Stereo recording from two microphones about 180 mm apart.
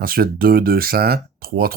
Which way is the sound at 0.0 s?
55° right (ahead or behind).